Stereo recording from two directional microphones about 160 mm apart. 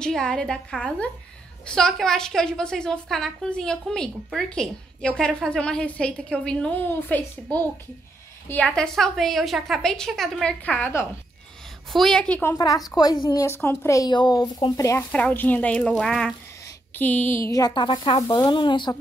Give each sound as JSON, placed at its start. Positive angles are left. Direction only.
{"t": 0.0, "sound": "a woman's voice", "side_deg": 5}
{"t": 8.5, "sound": "a woman's voice", "side_deg": 5}
{"t": 12.5, "sound": "a woman's voice", "side_deg": 25}
{"t": 15.0, "sound": "a woman's voice", "side_deg": 10}